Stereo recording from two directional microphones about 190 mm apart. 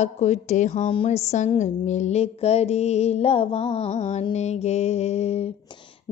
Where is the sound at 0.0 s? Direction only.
35° left (ahead or behind).